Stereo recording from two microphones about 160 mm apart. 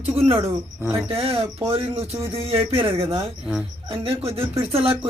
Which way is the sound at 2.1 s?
15° right (ahead or behind).